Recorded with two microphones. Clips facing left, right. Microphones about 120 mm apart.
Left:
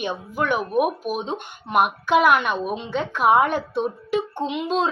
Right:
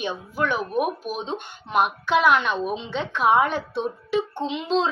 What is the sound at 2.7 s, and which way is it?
Speech, 55° left (ahead or behind).